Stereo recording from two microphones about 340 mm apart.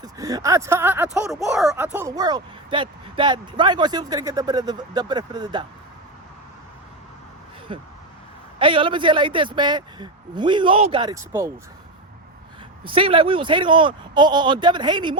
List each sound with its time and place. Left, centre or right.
0.0 s speech: centre
7.7 s speech: centre
12.8 s speech: centre